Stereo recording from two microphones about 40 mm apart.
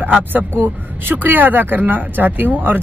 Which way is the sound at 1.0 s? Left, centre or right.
Right.